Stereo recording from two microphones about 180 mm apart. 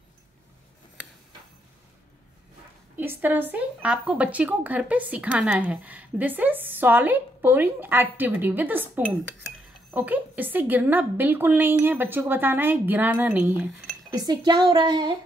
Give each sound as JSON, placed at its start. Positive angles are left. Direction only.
{"t": 3.0, "sound": "a woman's voice", "side_deg": -10}
{"t": 14.1, "sound": "a woman's voice", "side_deg": -20}